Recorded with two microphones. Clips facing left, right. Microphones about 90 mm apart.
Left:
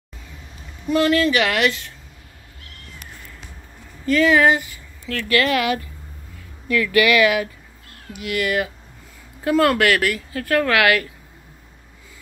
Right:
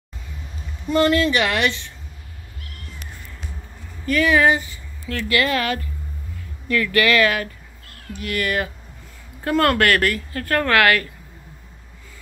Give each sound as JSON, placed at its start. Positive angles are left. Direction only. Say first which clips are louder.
{"t": 0.8, "sound": "speech", "louder": "even", "side_deg": 5}
{"t": 4.4, "sound": "speech", "louder": "left 1 dB", "side_deg": 15}
{"t": 5.0, "sound": "speech", "louder": "left 1 dB", "side_deg": -20}
{"t": 5.6, "sound": "speech", "louder": "left 2 dB", "side_deg": 10}